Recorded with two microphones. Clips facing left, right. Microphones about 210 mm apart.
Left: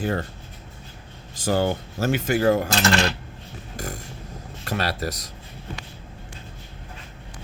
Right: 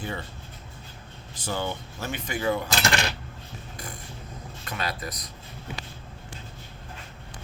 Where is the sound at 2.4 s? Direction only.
40° left (ahead or behind).